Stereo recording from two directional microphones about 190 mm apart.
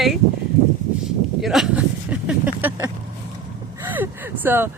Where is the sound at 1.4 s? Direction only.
Centre (ahead or behind).